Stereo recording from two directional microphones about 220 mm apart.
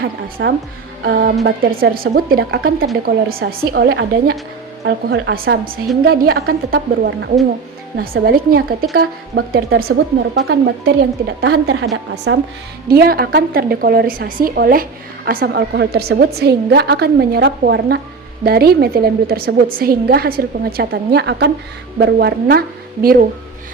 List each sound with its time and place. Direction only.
0.0 s a woman's voice: 50° right (ahead or behind)
12.9 s a woman's voice: 45° right (ahead or behind)